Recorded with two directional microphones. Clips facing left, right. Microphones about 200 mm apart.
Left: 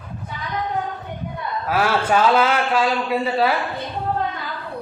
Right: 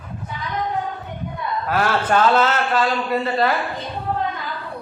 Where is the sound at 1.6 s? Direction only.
5° left (ahead or behind).